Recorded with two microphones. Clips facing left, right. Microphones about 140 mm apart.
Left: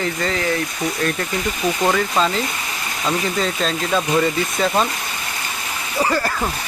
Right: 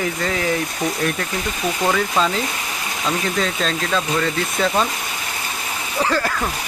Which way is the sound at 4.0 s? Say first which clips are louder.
Left 5 dB; 15° left (ahead or behind).